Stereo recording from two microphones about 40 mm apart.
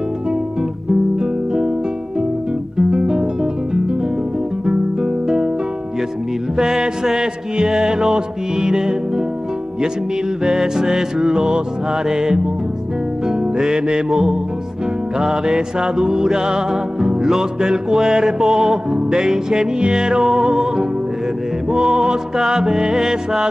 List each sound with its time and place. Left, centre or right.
1.2 s music: centre
2.8 s guitar: centre
4.6 s guitar: centre
6.5 s music: centre
10.4 s music: centre